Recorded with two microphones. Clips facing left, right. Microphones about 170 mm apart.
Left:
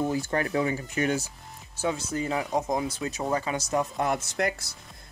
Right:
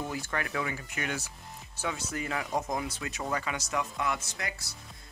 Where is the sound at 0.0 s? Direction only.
30° left (ahead or behind).